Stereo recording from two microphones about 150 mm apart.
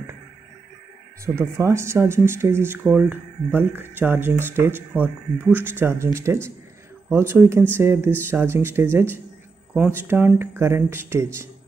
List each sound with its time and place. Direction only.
1.2 s speech: 20° right (ahead or behind)